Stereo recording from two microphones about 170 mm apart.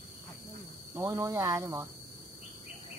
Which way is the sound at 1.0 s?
20° right (ahead or behind).